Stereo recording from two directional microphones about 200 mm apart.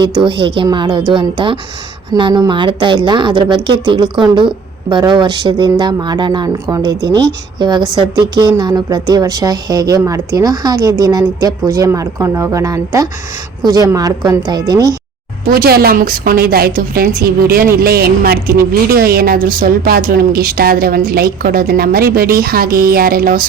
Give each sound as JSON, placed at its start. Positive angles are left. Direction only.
{"t": 0.0, "sound": "a woman's voice", "side_deg": -25}
{"t": 15.4, "sound": "speech", "side_deg": -50}